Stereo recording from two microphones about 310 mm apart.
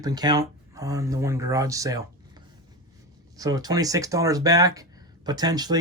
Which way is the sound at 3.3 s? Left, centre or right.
Centre.